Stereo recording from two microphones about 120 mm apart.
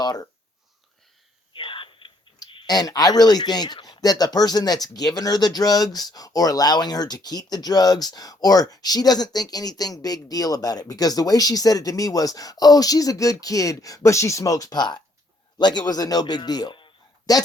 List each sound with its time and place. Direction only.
0.0 s speech: 30° left (ahead or behind)
1.5 s whispering: 45° left (ahead or behind)
2.5 s speech: 40° left (ahead or behind)